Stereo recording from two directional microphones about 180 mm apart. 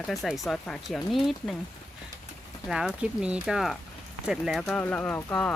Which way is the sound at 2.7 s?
5° right (ahead or behind).